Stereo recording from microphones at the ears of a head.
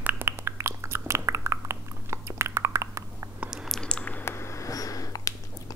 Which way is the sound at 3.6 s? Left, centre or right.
Centre.